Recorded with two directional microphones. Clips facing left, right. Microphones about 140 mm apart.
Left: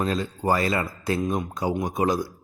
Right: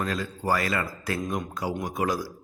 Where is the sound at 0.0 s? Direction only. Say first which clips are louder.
Left 4 dB; 25° left (ahead or behind).